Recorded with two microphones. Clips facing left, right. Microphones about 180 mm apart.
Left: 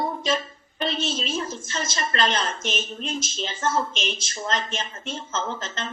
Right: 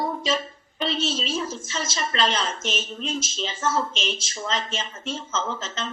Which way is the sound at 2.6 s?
10° left (ahead or behind).